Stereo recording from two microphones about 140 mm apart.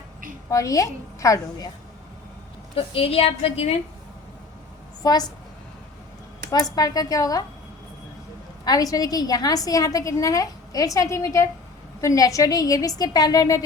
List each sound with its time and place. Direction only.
0.5 s a woman's voice: 25° left (ahead or behind)
2.7 s a woman's voice: 40° left (ahead or behind)
5.0 s a woman's voice: 30° left (ahead or behind)
6.5 s a woman's voice: 25° left (ahead or behind)
8.6 s a woman's voice: 25° left (ahead or behind)